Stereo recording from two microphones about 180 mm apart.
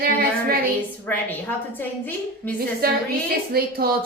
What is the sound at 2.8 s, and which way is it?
Child singing, 55° right (ahead or behind).